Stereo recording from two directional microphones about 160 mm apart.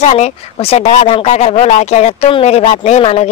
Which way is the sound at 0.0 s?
45° left (ahead or behind).